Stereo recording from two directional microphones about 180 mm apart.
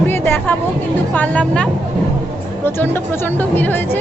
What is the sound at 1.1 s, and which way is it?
Speech, 5° left (ahead or behind).